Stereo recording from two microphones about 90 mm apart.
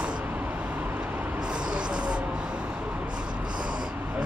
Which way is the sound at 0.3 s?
15° right (ahead or behind).